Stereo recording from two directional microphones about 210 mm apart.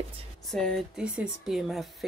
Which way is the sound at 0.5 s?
Centre (ahead or behind).